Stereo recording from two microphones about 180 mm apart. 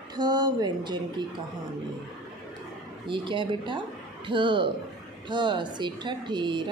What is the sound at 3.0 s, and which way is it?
A woman's voice, 25° right (ahead or behind).